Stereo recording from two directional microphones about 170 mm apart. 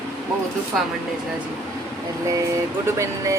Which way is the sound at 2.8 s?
15° right (ahead or behind).